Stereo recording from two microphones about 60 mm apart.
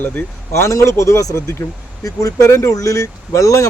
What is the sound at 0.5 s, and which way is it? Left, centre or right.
Speech, left.